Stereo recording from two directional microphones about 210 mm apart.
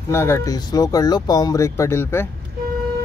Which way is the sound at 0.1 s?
10° left (ahead or behind).